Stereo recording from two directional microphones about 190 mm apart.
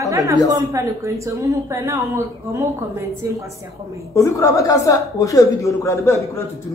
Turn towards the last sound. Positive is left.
turn(degrees=15)  # may be behind; listen again after turning